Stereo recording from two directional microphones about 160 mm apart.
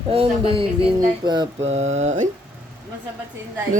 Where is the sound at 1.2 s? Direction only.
25° right (ahead or behind).